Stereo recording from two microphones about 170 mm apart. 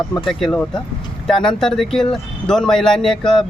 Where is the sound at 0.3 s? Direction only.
Centre (ahead or behind).